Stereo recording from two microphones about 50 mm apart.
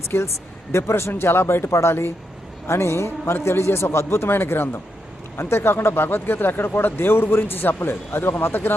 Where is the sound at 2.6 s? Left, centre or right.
Left.